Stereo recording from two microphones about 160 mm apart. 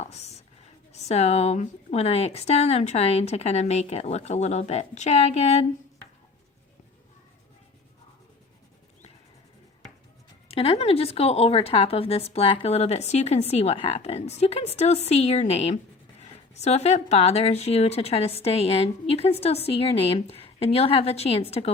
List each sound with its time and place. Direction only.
0.0 s a sound: 45° left (ahead or behind)
0.9 s a woman's voice: 45° left (ahead or behind)
10.5 s speech: 40° left (ahead or behind)